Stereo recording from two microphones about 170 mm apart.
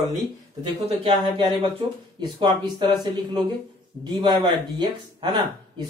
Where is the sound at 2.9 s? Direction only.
25° right (ahead or behind).